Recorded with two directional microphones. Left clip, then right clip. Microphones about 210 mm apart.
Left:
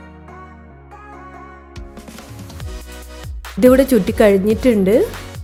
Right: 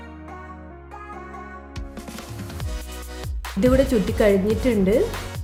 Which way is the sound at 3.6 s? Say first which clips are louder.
Left 7 dB; 35° left (ahead or behind).